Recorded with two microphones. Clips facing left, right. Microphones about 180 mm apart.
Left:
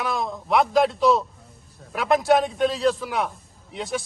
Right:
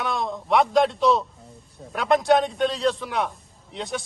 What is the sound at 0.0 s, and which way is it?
A man's voice, centre (ahead or behind).